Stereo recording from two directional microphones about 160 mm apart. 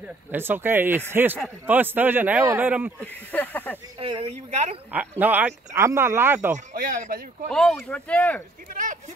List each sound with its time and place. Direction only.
0.3 s a man's voice: 15° right (ahead or behind)
3.0 s speech: 10° left (ahead or behind)
4.0 s speech: 35° right (ahead or behind)
4.9 s a man's voice: 10° right (ahead or behind)
6.5 s speech: 60° right (ahead or behind)
7.4 s speech: 5° left (ahead or behind)